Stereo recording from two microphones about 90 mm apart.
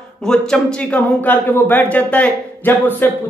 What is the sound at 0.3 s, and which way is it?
Speech, 10° left (ahead or behind).